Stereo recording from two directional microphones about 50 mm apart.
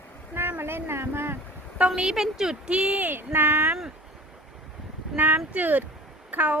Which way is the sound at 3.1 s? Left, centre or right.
Right.